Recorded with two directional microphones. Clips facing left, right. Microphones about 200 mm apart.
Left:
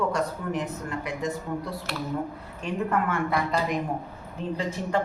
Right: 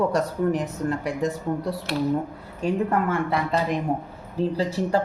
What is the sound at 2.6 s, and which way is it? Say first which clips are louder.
Speech: right 4 dB; 35° right (ahead or behind).